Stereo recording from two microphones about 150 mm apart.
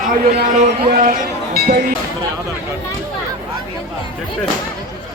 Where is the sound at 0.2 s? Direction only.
70° right (ahead or behind).